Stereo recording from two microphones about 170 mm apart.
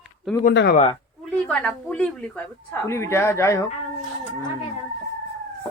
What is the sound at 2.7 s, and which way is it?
Speech, 15° left (ahead or behind).